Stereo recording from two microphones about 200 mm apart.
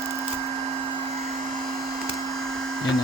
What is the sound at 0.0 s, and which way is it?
Vacuum cleaner, centre (ahead or behind).